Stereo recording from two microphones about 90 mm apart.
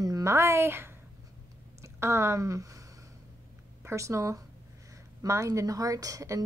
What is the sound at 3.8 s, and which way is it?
A woman's voice, 35° right (ahead or behind).